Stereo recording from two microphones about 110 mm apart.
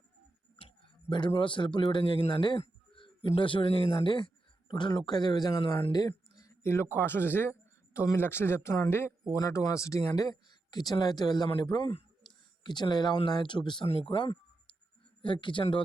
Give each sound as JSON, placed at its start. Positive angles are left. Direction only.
{"t": 1.1, "sound": "a man's voice", "side_deg": 45}
{"t": 2.6, "sound": "a sound", "side_deg": 55}
{"t": 3.2, "sound": "a man's voice", "side_deg": 50}
{"t": 5.9, "sound": "a sound", "side_deg": 35}
{"t": 6.6, "sound": "a man's voice", "side_deg": 25}
{"t": 13.8, "sound": "a man's voice", "side_deg": 60}